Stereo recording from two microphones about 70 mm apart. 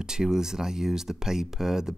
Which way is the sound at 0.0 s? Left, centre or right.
Centre.